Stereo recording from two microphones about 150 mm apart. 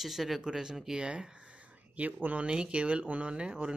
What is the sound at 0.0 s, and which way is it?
Speech, centre (ahead or behind).